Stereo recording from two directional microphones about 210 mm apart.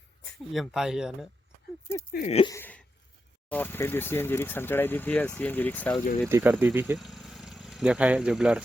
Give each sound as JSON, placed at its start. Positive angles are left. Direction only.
{"t": 0.5, "sound": "speech", "side_deg": 0}
{"t": 2.1, "sound": "speech", "side_deg": 30}
{"t": 2.5, "sound": "a sound", "side_deg": 10}
{"t": 3.5, "sound": "speech", "side_deg": 10}
{"t": 6.2, "sound": "speech", "side_deg": -10}